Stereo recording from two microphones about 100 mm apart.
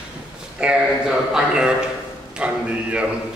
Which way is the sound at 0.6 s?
10° right (ahead or behind).